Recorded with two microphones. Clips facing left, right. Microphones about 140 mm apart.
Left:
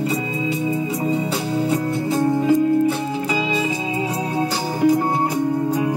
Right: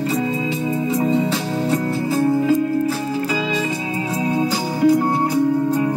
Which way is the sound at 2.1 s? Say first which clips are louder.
Even; 20° left (ahead or behind).